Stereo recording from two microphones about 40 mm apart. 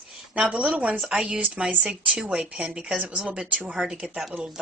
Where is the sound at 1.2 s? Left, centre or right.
Right.